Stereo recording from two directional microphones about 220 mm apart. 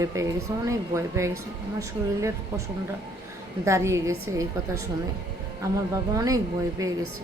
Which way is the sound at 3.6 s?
15° right (ahead or behind).